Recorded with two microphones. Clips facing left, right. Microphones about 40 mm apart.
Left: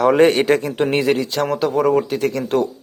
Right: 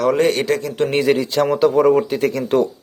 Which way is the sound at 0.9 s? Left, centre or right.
Centre.